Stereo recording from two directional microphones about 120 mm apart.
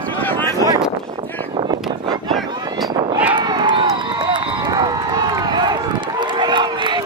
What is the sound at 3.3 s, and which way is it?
Run, 40° right (ahead or behind).